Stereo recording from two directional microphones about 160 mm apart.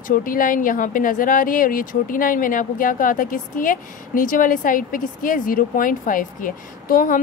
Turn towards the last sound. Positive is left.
turn(degrees=60)  # may be behind; listen again after turning